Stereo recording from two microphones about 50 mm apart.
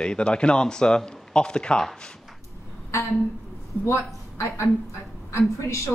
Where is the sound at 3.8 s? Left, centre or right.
Left.